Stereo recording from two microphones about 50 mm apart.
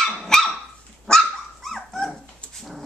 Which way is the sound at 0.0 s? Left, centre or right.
Centre.